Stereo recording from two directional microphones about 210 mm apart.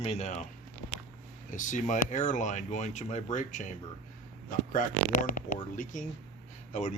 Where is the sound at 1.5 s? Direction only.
35° left (ahead or behind).